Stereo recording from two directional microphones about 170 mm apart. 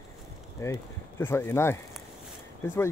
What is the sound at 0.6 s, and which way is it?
Speech, 15° left (ahead or behind).